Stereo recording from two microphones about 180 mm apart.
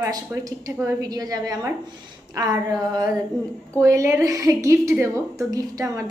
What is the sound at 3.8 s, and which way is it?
A woman's voice, 15° right (ahead or behind).